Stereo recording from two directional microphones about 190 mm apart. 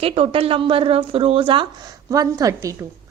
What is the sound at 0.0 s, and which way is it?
A woman's voice, 30° right (ahead or behind).